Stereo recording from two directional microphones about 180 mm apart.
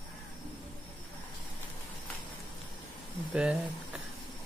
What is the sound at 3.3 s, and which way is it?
Speech, 5° right (ahead or behind).